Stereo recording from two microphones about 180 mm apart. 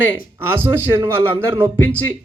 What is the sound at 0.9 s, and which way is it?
Speech, 15° right (ahead or behind).